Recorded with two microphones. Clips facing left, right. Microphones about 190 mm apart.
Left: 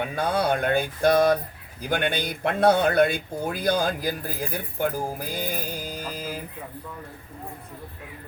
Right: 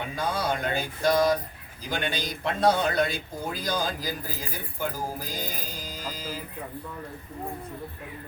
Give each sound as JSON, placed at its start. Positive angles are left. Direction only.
{"t": 0.2, "sound": "speech", "side_deg": 60}